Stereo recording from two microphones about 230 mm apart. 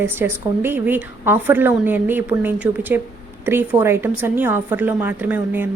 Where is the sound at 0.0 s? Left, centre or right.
Centre.